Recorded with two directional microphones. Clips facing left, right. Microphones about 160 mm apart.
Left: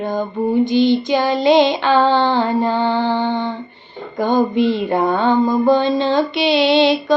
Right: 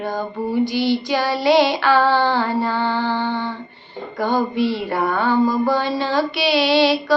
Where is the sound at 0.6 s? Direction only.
20° left (ahead or behind).